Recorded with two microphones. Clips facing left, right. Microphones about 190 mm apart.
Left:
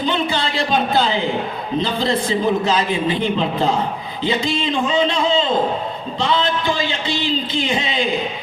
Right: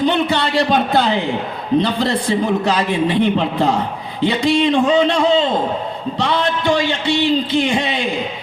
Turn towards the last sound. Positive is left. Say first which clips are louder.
# right 4 dB
turn(degrees=-65)  # may be behind; listen again after turning